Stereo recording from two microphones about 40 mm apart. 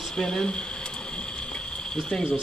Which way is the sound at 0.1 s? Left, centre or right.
Centre.